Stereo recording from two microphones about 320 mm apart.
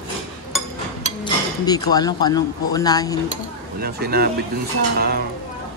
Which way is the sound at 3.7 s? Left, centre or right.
Right.